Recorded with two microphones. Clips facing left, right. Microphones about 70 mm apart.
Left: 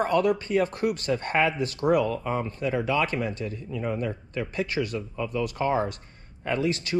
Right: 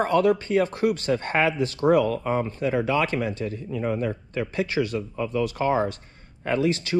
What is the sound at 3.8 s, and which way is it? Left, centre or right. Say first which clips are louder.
Speech: right 3 dB; right.